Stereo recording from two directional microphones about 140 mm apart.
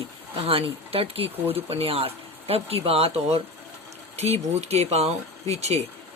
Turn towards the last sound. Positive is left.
turn(degrees=-50)  # may be behind; listen again after turning